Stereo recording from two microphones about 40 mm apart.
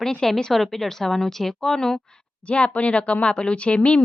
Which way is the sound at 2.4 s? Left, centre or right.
Left.